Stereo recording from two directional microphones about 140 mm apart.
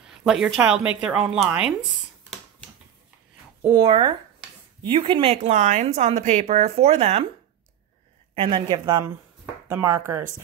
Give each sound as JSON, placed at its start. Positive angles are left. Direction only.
{"t": 0.0, "sound": "speech", "side_deg": -5}
{"t": 3.8, "sound": "speech", "side_deg": -35}
{"t": 5.5, "sound": "speech", "side_deg": -65}
{"t": 5.9, "sound": "a woman's voice", "side_deg": -55}
{"t": 8.4, "sound": "speech", "side_deg": -35}
{"t": 9.7, "sound": "speech", "side_deg": -15}